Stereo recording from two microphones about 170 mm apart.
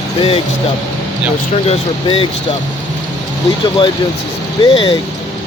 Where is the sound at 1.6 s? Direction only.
35° left (ahead or behind).